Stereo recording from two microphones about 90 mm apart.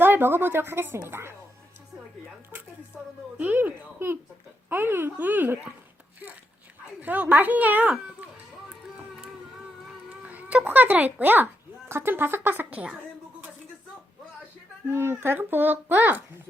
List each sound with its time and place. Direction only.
0.0 s a child's voice: 25° right (ahead or behind)
2.9 s a woman's voice: 15° right (ahead or behind)
7.0 s a child's voice: 20° right (ahead or behind)
10.1 s a child's voice: 15° right (ahead or behind)
14.8 s a child's voice: 25° right (ahead or behind)